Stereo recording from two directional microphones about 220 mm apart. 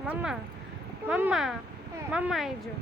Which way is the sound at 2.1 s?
5° right (ahead or behind).